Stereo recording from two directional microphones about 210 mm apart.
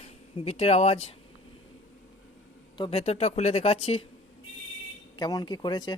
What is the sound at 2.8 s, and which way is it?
Speech, 30° left (ahead or behind).